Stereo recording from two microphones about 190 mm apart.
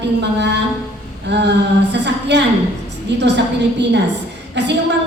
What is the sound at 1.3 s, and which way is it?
A woman's voice, 65° right (ahead or behind).